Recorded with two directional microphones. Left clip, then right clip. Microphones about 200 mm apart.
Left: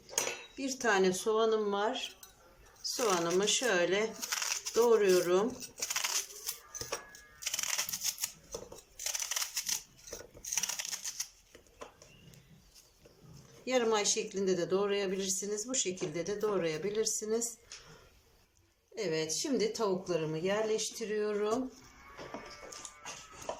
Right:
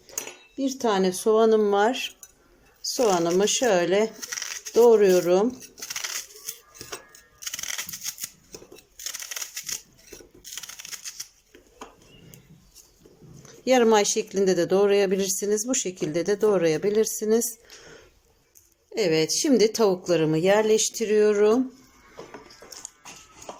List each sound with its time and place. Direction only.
0.1 s speech: 25° right (ahead or behind)
7.4 s a sound: centre (ahead or behind)
9.3 s crushing: centre (ahead or behind)
10.5 s a sound: centre (ahead or behind)
13.7 s speech: 40° right (ahead or behind)
18.9 s speech: 45° right (ahead or behind)
22.8 s music: 35° right (ahead or behind)